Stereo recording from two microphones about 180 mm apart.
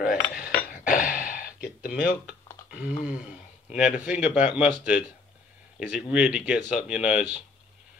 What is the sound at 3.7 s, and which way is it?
Speech, 5° right (ahead or behind).